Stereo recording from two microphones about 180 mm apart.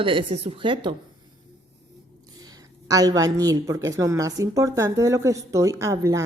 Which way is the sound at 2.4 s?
20° right (ahead or behind).